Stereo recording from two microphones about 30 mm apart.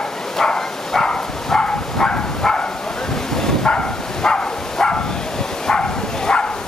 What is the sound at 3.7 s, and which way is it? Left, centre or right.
Bow-wow, left.